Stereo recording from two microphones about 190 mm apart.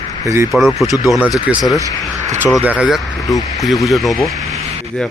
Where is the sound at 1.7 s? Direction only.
20° left (ahead or behind).